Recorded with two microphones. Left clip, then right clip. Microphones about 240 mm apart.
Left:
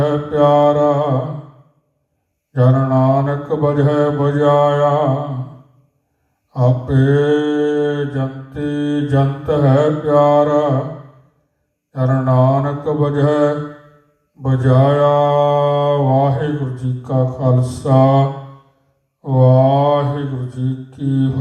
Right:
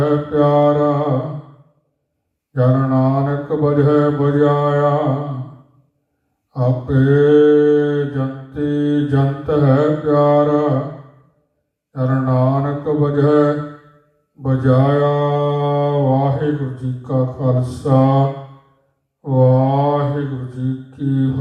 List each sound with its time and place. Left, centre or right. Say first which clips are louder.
0.0 s mantra: left 1 dB; left
2.5 s mantra: left 1 dB; left
6.5 s mantra: left 2 dB; left
11.9 s mantra: left 3 dB; left